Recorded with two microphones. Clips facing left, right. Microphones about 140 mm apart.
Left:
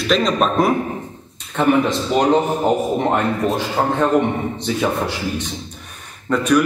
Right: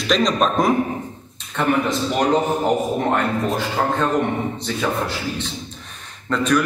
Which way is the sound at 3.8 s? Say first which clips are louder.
Left 4 dB; 15° left (ahead or behind).